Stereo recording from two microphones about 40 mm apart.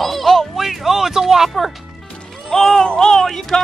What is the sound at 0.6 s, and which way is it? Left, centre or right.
Speech, centre.